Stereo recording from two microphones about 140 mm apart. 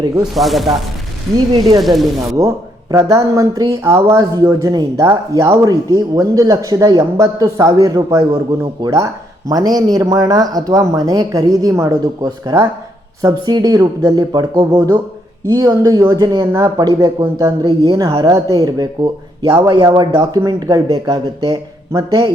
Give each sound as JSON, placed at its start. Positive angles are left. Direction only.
{"t": 0.3, "sound": "speech", "side_deg": 0}
{"t": 1.8, "sound": "speech", "side_deg": 0}
{"t": 2.9, "sound": "speech", "side_deg": -20}
{"t": 17.6, "sound": "speech", "side_deg": -35}